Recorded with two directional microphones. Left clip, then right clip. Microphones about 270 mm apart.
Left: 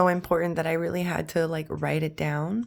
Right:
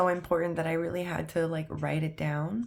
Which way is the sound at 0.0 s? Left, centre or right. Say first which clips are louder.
Left 4 dB; left.